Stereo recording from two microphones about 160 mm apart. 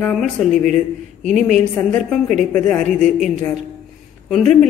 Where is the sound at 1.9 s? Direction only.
5° left (ahead or behind).